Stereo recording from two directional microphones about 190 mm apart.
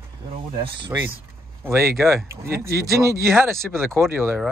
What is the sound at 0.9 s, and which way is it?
Speech, 15° right (ahead or behind).